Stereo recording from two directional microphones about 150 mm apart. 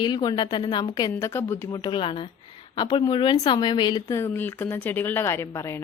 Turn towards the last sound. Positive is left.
turn(degrees=20)  # may be behind; listen again after turning